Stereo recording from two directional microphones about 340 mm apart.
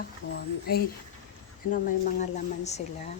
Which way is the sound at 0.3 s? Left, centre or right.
Left.